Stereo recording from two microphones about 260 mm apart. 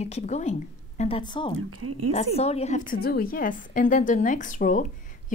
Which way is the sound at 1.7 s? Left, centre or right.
Right.